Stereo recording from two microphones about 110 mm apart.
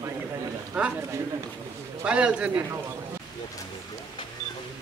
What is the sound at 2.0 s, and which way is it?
Speech, 10° right (ahead or behind).